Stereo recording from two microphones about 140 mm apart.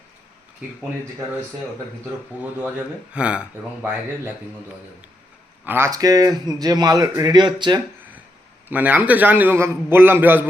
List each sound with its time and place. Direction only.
2.4 s a man's voice: 10° right (ahead or behind)
5.6 s a man's voice: 15° right (ahead or behind)
5.9 s speech: 25° right (ahead or behind)
8.7 s a man's voice: 10° right (ahead or behind)